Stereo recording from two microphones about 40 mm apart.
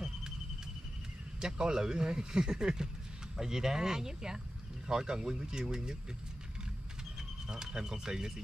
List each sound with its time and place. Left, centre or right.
1.4 s speech: centre
7.4 s speech: centre